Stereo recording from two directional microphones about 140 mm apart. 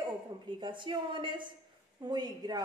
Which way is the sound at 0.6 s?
35° right (ahead or behind).